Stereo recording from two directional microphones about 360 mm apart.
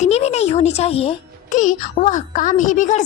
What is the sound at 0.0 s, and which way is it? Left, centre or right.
A child's voice, centre.